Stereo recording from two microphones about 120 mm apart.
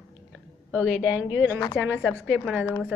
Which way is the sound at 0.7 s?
10° right (ahead or behind).